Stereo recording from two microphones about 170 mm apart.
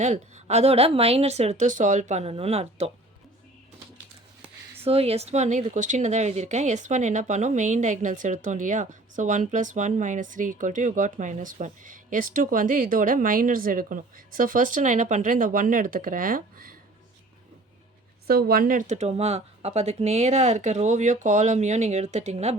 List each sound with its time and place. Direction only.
0.0 s speech: 40° right (ahead or behind)
4.8 s speech: 35° right (ahead or behind); by 16.7 s 55° right (ahead or behind)
18.3 s speech: 65° right (ahead or behind); by 22.5 s 40° right (ahead or behind)